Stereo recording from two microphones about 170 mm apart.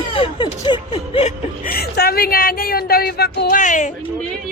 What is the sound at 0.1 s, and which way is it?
Speech, 30° left (ahead or behind).